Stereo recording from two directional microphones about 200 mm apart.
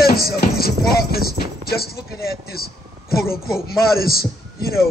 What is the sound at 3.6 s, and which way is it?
A man's voice, 50° left (ahead or behind).